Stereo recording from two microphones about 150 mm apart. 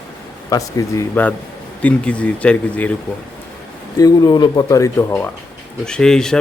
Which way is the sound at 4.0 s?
25° left (ahead or behind).